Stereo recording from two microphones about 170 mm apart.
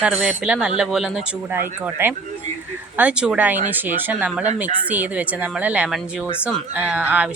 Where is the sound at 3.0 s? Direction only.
5° right (ahead or behind).